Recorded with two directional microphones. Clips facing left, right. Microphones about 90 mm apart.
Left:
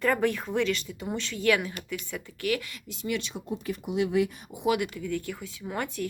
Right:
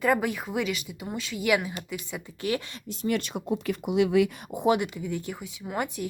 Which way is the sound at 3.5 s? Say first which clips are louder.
Right 5 dB; 90° right.